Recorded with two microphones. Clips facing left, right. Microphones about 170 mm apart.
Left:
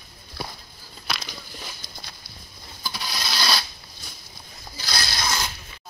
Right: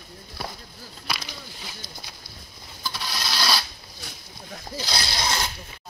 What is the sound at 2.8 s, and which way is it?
Rub, 5° left (ahead or behind).